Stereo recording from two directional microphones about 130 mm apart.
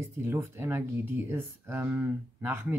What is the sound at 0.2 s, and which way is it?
Speech, 20° right (ahead or behind).